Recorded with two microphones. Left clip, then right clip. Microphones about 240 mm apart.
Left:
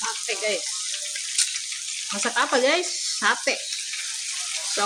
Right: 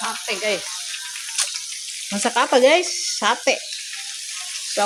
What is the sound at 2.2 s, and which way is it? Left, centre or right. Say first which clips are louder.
Frying: right 6 dB; centre.